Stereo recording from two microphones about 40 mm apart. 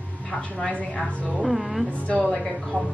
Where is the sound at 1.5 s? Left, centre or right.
Right.